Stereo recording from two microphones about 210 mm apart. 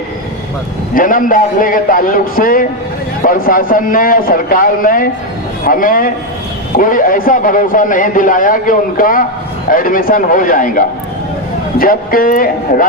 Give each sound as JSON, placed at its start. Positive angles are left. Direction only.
{"t": 0.9, "sound": "a man's voice", "side_deg": 40}